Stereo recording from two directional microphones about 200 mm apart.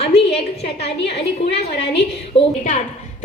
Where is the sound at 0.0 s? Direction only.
30° left (ahead or behind).